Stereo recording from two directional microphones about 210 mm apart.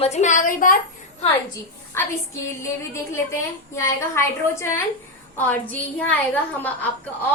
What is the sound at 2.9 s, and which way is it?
A woman's voice, 15° left (ahead or behind).